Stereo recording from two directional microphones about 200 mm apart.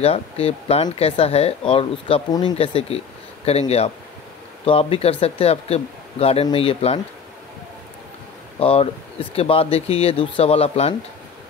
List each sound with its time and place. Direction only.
0.0 s speech: 30° left (ahead or behind)
8.5 s speech: 30° left (ahead or behind)